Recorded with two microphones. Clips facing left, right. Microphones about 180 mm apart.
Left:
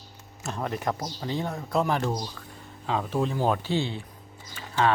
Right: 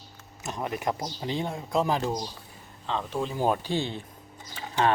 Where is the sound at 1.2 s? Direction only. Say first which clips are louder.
Even; 20° right (ahead or behind).